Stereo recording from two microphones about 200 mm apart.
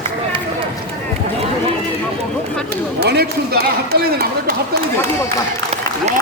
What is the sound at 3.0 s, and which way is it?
Speech, 55° right (ahead or behind).